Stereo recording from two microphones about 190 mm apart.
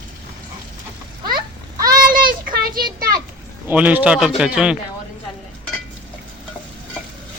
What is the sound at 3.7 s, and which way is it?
A man's voice, 10° right (ahead or behind).